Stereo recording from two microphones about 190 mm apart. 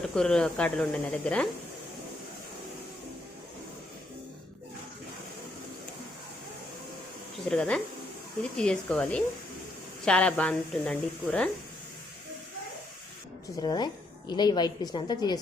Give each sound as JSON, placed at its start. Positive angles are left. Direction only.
{"t": 0.1, "sound": "a woman's voice", "side_deg": 5}
{"t": 7.4, "sound": "a woman's voice", "side_deg": 5}
{"t": 13.6, "sound": "a woman's voice", "side_deg": 20}